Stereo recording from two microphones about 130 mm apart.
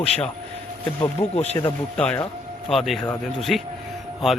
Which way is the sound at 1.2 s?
30° left (ahead or behind).